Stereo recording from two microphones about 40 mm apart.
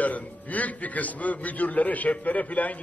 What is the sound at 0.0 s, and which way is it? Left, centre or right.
A man's voice, left.